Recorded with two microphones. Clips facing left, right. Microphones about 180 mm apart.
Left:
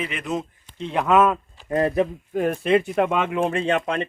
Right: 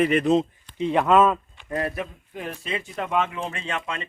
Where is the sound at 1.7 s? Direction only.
25° left (ahead or behind).